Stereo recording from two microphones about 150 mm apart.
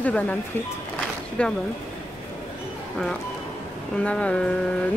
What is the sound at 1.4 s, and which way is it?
Speech, 10° left (ahead or behind).